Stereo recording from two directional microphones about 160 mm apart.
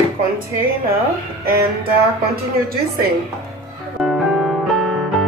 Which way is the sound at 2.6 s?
70° right (ahead or behind).